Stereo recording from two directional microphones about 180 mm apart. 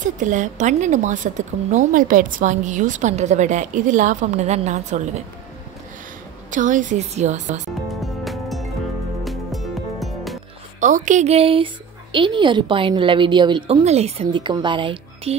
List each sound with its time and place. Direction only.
0.0 s a woman's voice: 45° right (ahead or behind)
6.5 s a woman's voice: 45° right (ahead or behind)
7.9 s music: centre (ahead or behind)
10.8 s a woman's voice: 45° right (ahead or behind); by 15.3 s 25° right (ahead or behind)